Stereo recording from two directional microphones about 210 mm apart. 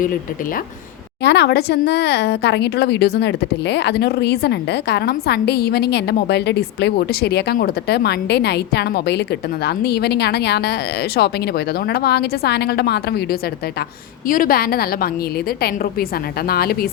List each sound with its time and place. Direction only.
0.0 s speech: 40° left (ahead or behind)
1.2 s speech: 55° left (ahead or behind)